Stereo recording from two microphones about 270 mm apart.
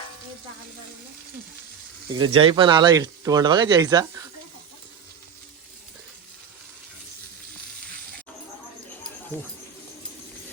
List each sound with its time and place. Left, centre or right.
2.1 s speech: centre